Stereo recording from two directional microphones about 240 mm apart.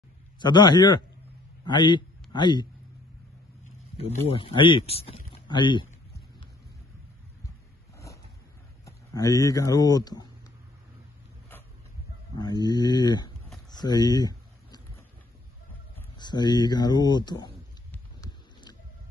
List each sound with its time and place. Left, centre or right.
0.4 s a man's voice: centre
4.3 s speech: left
8.8 s speech: centre
12.4 s speech: centre
13.7 s a sound: centre
16.2 s speech: centre
17.9 s a sound: centre